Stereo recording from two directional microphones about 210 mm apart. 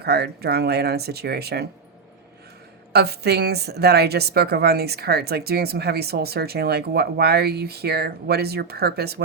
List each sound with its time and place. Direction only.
0.0 s a woman's voice: 50° right (ahead or behind)
2.9 s a woman's voice: 50° right (ahead or behind)